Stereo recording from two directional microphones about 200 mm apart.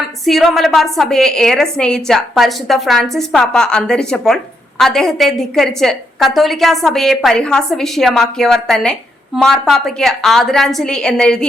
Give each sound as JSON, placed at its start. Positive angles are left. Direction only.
{"t": 0.3, "sound": "a woman's voice", "side_deg": 0}